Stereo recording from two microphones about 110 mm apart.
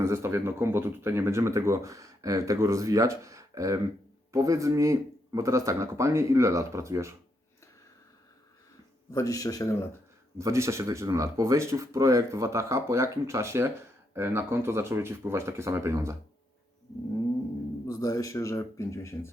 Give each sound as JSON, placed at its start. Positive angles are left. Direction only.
{"t": 0.0, "sound": "speech", "side_deg": -25}
{"t": 9.1, "sound": "speech", "side_deg": 35}
{"t": 10.3, "sound": "speech", "side_deg": -25}
{"t": 17.8, "sound": "speech", "side_deg": 35}